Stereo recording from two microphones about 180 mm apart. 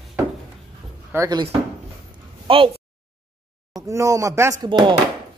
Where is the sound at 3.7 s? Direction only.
20° right (ahead or behind).